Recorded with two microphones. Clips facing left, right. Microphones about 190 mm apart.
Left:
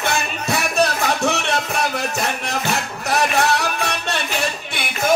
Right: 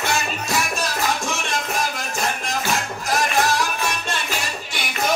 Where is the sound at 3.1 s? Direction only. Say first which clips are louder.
Left 3 dB; 65° left (ahead or behind).